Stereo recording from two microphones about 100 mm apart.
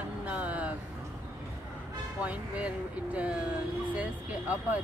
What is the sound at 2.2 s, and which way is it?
Speech, 15° right (ahead or behind).